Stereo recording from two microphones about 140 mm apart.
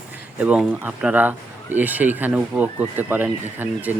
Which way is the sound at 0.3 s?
10° right (ahead or behind).